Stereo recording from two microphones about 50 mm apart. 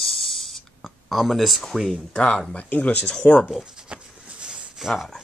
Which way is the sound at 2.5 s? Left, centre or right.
Left.